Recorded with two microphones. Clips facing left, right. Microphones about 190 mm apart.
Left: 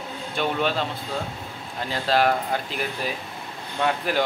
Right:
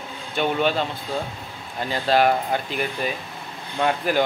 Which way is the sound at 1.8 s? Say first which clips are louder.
Right 2 dB; centre (ahead or behind).